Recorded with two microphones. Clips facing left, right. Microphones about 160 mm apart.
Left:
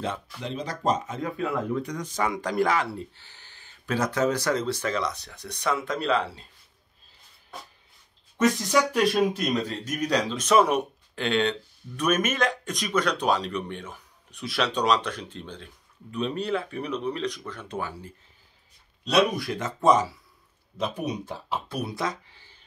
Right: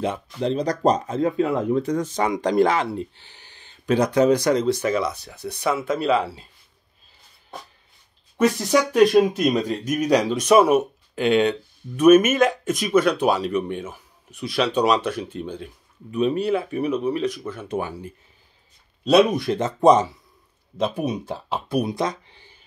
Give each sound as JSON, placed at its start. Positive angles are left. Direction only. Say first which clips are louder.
{"t": 0.4, "sound": "speech", "louder": "right 14 dB", "side_deg": -35}
{"t": 8.9, "sound": "speech", "louder": "right 7 dB", "side_deg": -10}
{"t": 21.6, "sound": "speech", "louder": "right 10 dB", "side_deg": -15}